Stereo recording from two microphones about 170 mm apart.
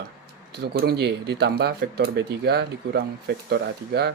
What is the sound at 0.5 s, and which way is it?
Speech, 70° right (ahead or behind).